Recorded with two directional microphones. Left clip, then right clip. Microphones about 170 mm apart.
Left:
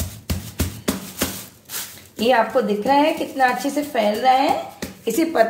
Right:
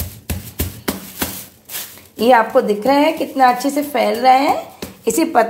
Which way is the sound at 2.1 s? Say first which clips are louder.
Right 5 dB; 40° right (ahead or behind).